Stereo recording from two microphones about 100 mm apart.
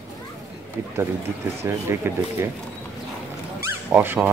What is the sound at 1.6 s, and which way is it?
Speech, 25° right (ahead or behind).